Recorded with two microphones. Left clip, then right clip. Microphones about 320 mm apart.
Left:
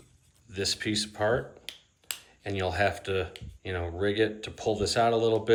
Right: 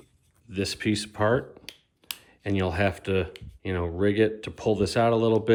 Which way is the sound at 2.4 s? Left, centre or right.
Centre.